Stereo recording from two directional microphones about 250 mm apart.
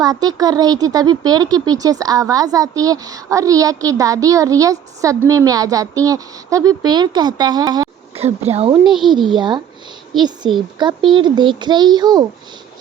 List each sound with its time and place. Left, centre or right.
0.0 s speech: centre
8.8 s speech: centre
9.1 s a woman's voice: centre